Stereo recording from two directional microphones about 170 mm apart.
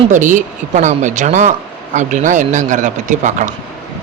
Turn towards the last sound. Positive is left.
turn(degrees=-45)  # may be behind; listen again after turning